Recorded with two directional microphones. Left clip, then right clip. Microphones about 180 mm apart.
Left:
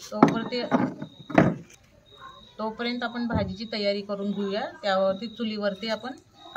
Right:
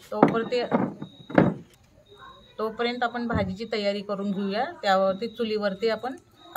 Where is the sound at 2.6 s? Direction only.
45° right (ahead or behind).